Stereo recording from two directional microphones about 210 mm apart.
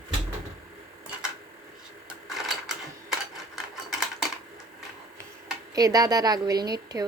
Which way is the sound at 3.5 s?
Centre (ahead or behind).